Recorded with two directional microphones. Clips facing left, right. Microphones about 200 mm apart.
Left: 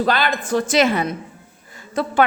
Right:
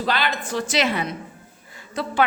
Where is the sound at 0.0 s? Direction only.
50° left (ahead or behind).